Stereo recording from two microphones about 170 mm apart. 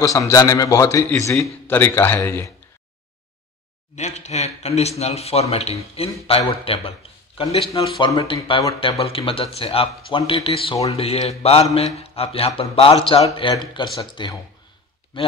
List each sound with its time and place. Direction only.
0.0 s a man's voice: 20° left (ahead or behind)
3.9 s speech: 40° left (ahead or behind)
7.7 s a man's voice: 20° left (ahead or behind)
8.7 s a man's voice: 35° left (ahead or behind)